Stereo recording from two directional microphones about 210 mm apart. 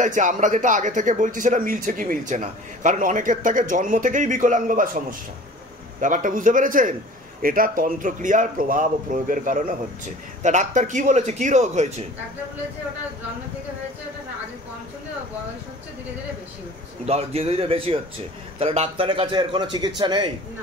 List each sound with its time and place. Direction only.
0.0 s speech: 35° right (ahead or behind)
17.0 s a man's voice: 30° right (ahead or behind)